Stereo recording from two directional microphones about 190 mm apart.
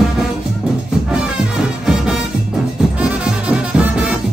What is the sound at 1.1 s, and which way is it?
Music, 5° right (ahead or behind).